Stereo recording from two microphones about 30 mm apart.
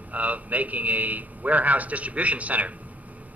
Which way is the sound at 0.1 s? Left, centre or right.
Right.